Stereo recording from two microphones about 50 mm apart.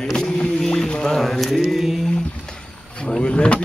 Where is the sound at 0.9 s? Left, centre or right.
Centre.